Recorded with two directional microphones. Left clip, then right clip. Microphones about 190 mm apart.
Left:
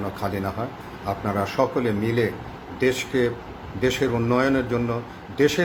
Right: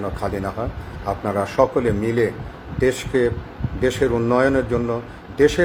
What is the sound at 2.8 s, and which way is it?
Speech, 5° left (ahead or behind).